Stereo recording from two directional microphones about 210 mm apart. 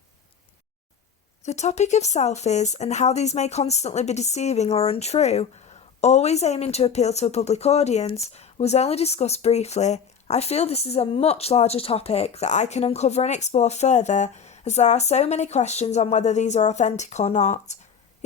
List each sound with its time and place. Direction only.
1.5 s speech: 30° left (ahead or behind)